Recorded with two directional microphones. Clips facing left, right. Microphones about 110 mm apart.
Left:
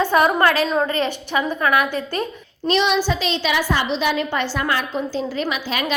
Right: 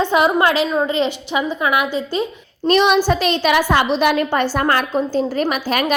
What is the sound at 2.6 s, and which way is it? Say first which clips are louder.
A woman's voice: right 5 dB; 50° right (ahead or behind).